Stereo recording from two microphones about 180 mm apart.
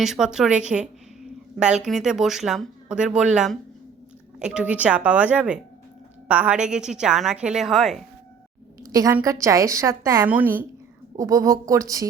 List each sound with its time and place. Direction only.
0.0 s a woman's voice: 5° right (ahead or behind)
8.8 s a sound: 20° right (ahead or behind)
9.1 s speech: 15° right (ahead or behind)